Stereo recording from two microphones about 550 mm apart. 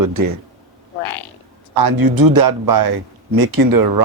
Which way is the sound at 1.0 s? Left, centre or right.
Left.